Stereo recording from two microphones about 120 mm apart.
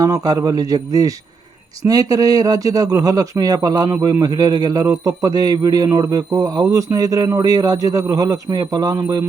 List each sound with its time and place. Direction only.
0.0 s a man's voice: 30° right (ahead or behind)